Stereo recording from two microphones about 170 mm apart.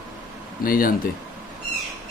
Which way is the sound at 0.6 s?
55° left (ahead or behind).